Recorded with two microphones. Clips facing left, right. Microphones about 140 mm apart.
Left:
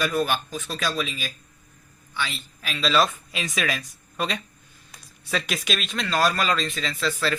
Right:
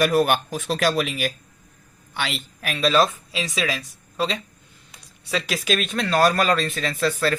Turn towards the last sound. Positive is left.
turn(degrees=-50)  # may be behind; listen again after turning